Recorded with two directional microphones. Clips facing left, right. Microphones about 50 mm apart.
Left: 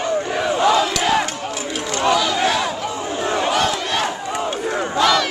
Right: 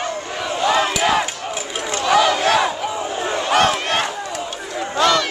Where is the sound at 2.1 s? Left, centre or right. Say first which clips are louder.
Right 7 dB; right.